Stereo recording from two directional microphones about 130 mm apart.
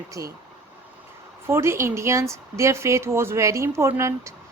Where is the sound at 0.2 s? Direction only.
25° right (ahead or behind).